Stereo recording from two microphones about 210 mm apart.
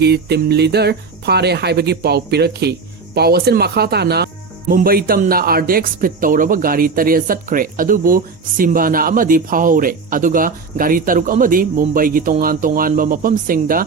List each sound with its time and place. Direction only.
0.0 s speech: 50° right (ahead or behind)